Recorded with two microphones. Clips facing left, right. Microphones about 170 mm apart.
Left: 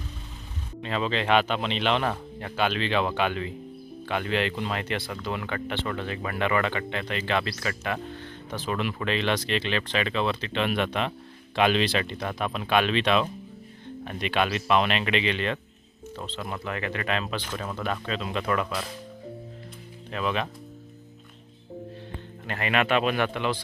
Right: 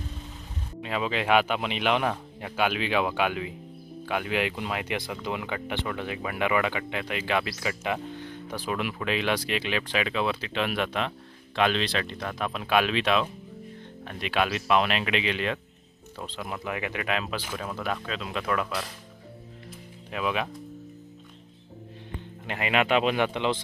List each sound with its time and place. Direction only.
0.8 s speech: 10° right (ahead or behind)
20.1 s speech: 10° right (ahead or behind)
22.4 s speech: 15° right (ahead or behind)